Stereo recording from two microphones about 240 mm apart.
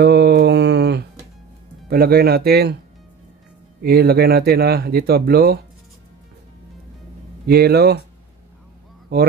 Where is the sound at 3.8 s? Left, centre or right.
Right.